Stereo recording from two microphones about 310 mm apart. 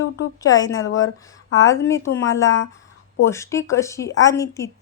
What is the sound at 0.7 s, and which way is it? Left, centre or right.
Speech, left.